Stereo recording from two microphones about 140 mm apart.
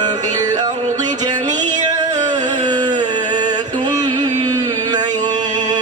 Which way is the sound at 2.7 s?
30° right (ahead or behind).